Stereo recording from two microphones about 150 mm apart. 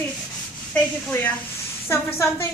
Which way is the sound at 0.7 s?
10° left (ahead or behind).